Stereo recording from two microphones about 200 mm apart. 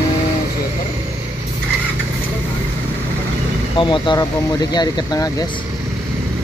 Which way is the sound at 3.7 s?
25° left (ahead or behind).